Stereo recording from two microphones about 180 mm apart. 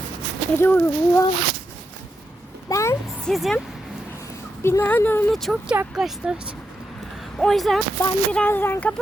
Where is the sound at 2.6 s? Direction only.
15° left (ahead or behind).